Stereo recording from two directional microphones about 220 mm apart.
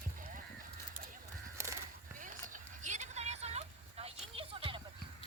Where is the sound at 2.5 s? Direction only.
35° right (ahead or behind).